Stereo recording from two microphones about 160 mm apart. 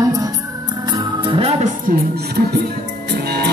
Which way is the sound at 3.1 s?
90° right.